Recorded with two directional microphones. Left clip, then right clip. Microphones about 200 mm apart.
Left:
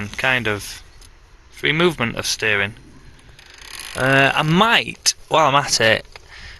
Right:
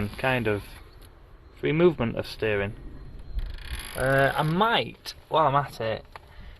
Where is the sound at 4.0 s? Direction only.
25° left (ahead or behind).